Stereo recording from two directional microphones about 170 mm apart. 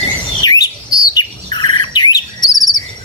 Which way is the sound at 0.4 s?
25° left (ahead or behind).